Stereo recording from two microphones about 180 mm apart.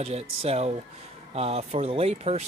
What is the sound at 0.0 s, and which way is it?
Speech, 35° right (ahead or behind).